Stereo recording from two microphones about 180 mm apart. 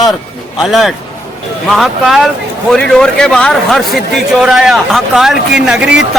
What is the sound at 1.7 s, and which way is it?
A man's voice, centre (ahead or behind).